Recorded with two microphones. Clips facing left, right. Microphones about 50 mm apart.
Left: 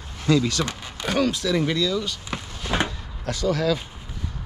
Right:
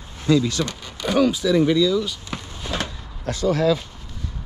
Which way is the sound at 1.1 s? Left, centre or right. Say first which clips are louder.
Right 5 dB; centre.